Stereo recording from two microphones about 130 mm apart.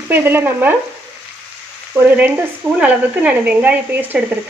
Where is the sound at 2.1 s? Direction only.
15° right (ahead or behind).